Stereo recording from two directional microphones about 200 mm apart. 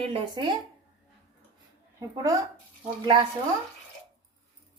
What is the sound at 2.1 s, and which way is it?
Speech, 15° right (ahead or behind).